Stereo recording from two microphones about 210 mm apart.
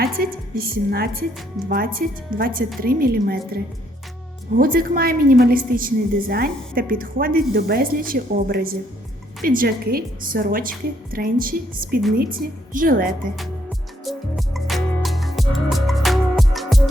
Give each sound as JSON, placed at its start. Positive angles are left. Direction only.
{"t": 0.0, "sound": "a woman's voice", "side_deg": -45}
{"t": 14.0, "sound": "music", "side_deg": 0}